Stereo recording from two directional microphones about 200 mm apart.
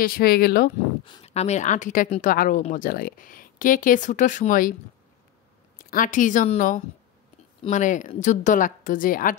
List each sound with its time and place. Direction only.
0.0 s a woman's voice: 50° left (ahead or behind)
1.0 s a woman's voice: 25° left (ahead or behind)
5.9 s a woman's voice: 40° left (ahead or behind)